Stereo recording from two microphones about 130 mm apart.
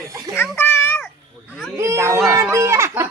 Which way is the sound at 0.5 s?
20° left (ahead or behind).